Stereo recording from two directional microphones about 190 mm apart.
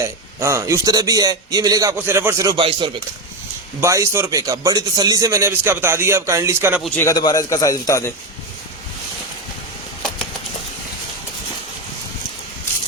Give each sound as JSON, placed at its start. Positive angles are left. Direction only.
{"t": 0.0, "sound": "a man's voice", "side_deg": -15}
{"t": 7.0, "sound": "a man's voice", "side_deg": 20}